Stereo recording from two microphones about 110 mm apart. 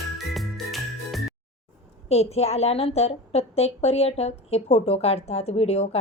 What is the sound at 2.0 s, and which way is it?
A woman's voice, 75° left (ahead or behind).